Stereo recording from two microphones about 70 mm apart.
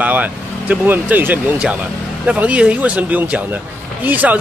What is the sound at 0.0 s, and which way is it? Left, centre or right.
Speech, right.